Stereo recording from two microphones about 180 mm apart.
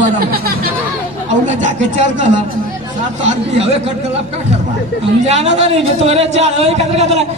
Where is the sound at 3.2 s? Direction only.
35° right (ahead or behind).